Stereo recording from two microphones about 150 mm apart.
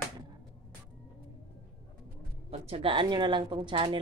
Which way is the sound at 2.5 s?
40° right (ahead or behind).